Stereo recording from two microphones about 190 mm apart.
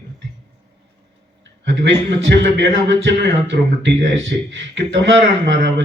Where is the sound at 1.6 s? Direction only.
70° right (ahead or behind).